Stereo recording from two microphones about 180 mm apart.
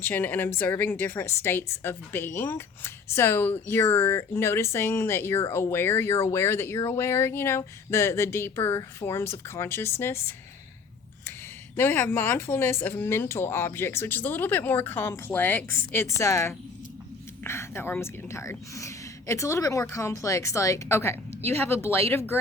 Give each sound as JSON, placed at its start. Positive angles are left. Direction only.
{"t": 0.0, "sound": "speech", "side_deg": 10}
{"t": 11.8, "sound": "speech", "side_deg": 10}